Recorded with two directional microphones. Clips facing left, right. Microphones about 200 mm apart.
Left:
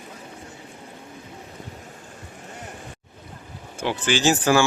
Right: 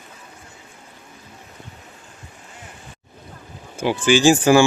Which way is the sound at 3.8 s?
10° right (ahead or behind).